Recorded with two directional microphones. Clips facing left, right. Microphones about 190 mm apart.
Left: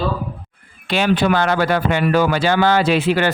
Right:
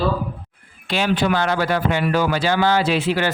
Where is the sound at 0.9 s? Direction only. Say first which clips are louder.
Left 3 dB; 60° left (ahead or behind).